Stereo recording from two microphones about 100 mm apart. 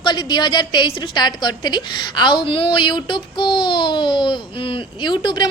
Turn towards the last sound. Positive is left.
turn(degrees=50)  # may be behind; listen again after turning